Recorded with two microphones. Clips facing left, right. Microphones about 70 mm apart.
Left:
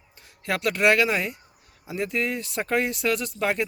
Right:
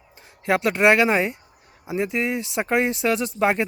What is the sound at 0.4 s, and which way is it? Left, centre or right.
Speech, right.